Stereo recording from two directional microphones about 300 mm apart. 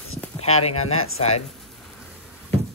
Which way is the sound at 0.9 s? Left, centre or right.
Left.